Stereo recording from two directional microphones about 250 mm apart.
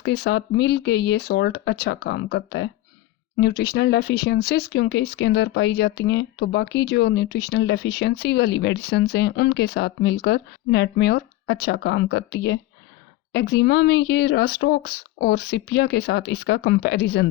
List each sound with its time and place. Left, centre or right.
0.0 s speech: left